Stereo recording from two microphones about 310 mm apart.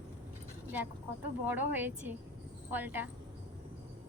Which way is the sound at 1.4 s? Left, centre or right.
Centre.